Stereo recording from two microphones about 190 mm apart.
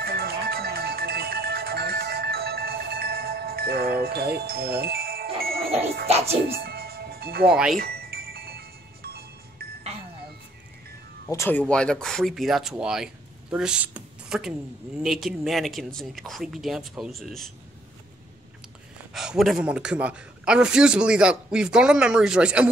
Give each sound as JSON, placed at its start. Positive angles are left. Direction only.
{"t": 0.0, "sound": "music", "side_deg": -55}
{"t": 6.0, "sound": "speech", "side_deg": -35}
{"t": 6.5, "sound": "music", "side_deg": -55}
{"t": 7.5, "sound": "a man's voice", "side_deg": -5}
{"t": 7.8, "sound": "music", "side_deg": -55}
{"t": 11.2, "sound": "a man's voice", "side_deg": 15}
{"t": 19.1, "sound": "a man's voice", "side_deg": 0}